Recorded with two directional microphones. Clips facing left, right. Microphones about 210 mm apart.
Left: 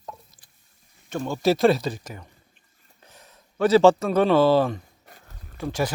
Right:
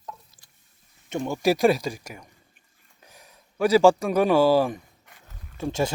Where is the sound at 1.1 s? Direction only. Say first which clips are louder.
Left 1 dB; 15° right (ahead or behind).